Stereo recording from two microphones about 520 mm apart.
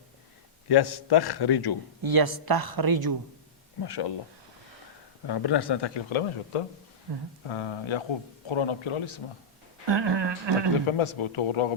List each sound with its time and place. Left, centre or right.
0.7 s speech: left
2.0 s a woman's voice: right
3.8 s speech: left
5.2 s a man's voice: left
9.8 s a woman's voice: right
10.8 s a man's voice: left